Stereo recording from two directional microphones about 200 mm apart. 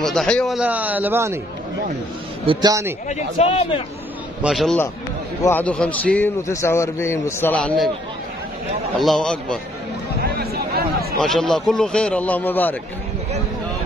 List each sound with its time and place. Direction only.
0.0 s a man's voice: centre (ahead or behind)
2.4 s a man's voice: 25° right (ahead or behind)
3.1 s a man's voice: 30° left (ahead or behind)
4.4 s a man's voice: centre (ahead or behind)
9.0 s speech: centre (ahead or behind)
10.2 s a sound: 50° right (ahead or behind)
11.1 s speech: centre (ahead or behind)